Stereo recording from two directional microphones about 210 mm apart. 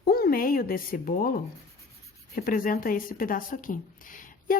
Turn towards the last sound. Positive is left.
turn(degrees=40)  # may be behind; listen again after turning